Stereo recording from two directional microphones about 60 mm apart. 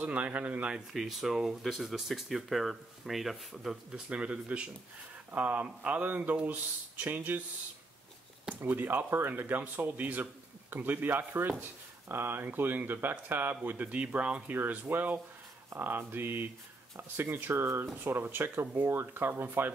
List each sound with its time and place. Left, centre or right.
0.0 s speech: right; by 3.7 s centre
3.9 s speech: centre
8.5 s speech: right
14.6 s speech: right